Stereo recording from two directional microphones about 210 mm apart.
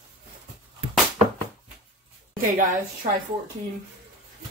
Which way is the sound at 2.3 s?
40° right (ahead or behind).